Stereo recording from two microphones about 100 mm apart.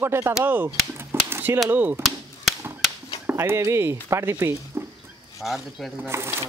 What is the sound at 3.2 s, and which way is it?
Speech, 25° right (ahead or behind).